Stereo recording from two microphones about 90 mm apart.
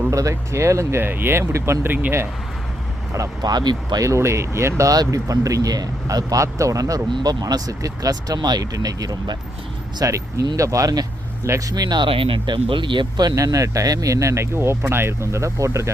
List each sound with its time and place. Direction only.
0.1 s speech: 35° right (ahead or behind); by 2.2 s 20° right (ahead or behind)
3.2 s speech: 50° right (ahead or behind)
4.0 s speech: 35° right (ahead or behind)
11.7 s speech: 50° right (ahead or behind)
12.0 s speech: 85° right; by 15.9 s 35° right (ahead or behind)